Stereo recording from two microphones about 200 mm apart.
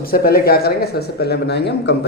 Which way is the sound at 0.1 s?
50° left (ahead or behind).